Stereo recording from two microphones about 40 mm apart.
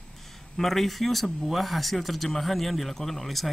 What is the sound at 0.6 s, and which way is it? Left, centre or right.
Speech, centre.